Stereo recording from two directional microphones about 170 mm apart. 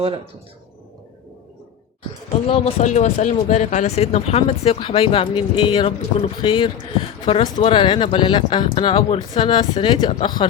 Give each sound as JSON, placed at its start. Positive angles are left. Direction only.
{"t": 2.5, "sound": "speech", "side_deg": 35}